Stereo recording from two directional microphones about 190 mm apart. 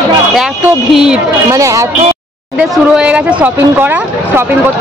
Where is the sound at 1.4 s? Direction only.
15° right (ahead or behind).